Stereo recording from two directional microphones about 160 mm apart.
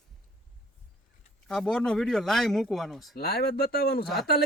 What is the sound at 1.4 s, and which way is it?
Speech, 5° left (ahead or behind).